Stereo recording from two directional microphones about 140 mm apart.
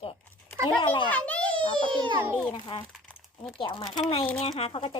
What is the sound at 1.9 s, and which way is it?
Speech, 35° right (ahead or behind).